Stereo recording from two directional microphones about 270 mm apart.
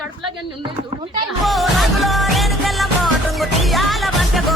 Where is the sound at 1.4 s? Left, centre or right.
Centre.